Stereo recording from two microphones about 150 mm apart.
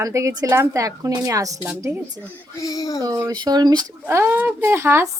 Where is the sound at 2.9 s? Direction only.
25° right (ahead or behind).